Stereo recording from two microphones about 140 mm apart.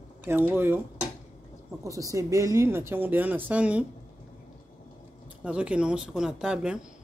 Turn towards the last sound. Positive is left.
turn(degrees=-5)  # may be behind; listen again after turning